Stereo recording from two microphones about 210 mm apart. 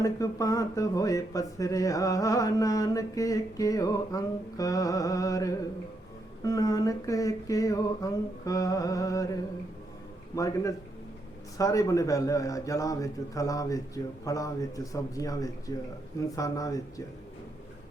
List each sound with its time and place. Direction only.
0.0 s speech: 15° left (ahead or behind)
10.3 s speech: 15° left (ahead or behind)